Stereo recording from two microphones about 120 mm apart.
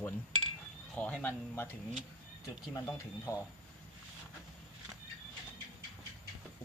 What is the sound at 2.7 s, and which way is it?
Speech, 25° left (ahead or behind).